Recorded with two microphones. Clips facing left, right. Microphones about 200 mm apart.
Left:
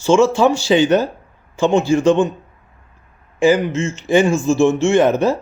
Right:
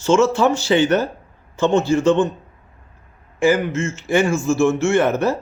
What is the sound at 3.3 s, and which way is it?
Speech, 15° left (ahead or behind).